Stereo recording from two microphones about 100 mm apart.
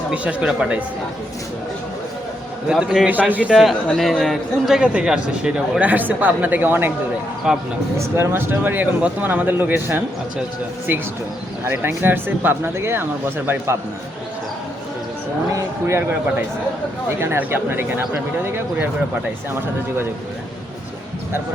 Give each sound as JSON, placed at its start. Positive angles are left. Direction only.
{"t": 0.1, "sound": "a man's voice", "side_deg": -10}
{"t": 2.7, "sound": "a man's voice", "side_deg": 0}
{"t": 3.1, "sound": "a man's voice", "side_deg": -15}
{"t": 3.5, "sound": "a man's voice", "side_deg": 0}
{"t": 7.5, "sound": "a man's voice", "side_deg": -5}
{"t": 7.9, "sound": "speech", "side_deg": -25}
{"t": 11.6, "sound": "speech", "side_deg": -20}
{"t": 15.5, "sound": "speech", "side_deg": -30}
{"t": 17.2, "sound": "speech", "side_deg": -20}